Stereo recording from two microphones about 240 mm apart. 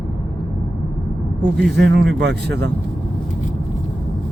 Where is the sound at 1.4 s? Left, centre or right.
Right.